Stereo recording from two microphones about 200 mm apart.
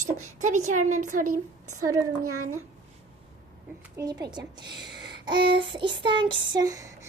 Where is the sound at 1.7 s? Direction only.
90° right.